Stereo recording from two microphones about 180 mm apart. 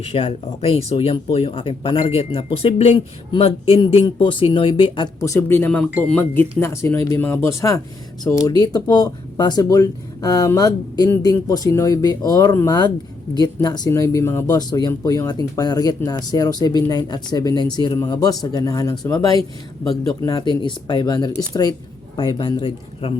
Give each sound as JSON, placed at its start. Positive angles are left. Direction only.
{"t": 0.0, "sound": "speech", "side_deg": 35}
{"t": 5.2, "sound": "speech", "side_deg": 15}